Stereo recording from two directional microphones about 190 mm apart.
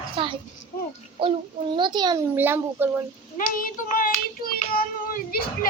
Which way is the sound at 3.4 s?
45° left (ahead or behind).